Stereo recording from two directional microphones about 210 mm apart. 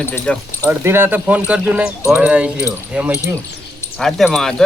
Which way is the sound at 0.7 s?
10° right (ahead or behind).